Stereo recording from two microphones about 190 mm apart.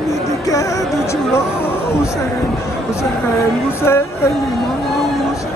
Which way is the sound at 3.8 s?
15° left (ahead or behind).